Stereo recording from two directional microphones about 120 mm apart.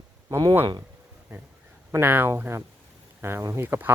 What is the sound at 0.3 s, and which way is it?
Speech, 25° right (ahead or behind).